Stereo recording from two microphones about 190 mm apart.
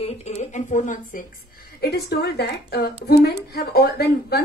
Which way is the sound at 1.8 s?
60° left (ahead or behind).